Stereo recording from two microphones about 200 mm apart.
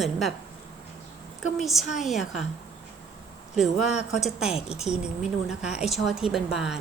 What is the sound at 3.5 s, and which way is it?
A woman's voice, centre (ahead or behind).